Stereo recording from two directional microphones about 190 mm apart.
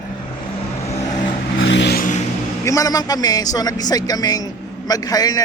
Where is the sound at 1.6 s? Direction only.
75° left (ahead or behind).